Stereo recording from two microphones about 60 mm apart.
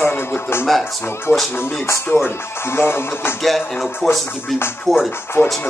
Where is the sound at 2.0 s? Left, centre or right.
Left.